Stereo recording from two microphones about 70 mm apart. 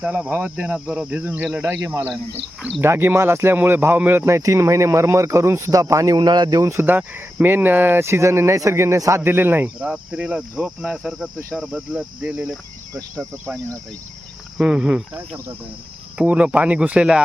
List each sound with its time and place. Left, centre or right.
0.0 s cricket: right
2.6 s speech: centre
2.8 s speech: right
4.2 s speech: right
6.1 s speech: right
6.6 s speech: right
6.8 s speech: right
9.2 s speech: right
9.8 s cricket: centre
14.6 s cricket: centre
16.1 s cricket: centre